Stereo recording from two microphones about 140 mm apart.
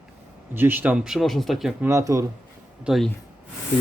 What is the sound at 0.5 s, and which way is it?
Speech, 15° right (ahead or behind).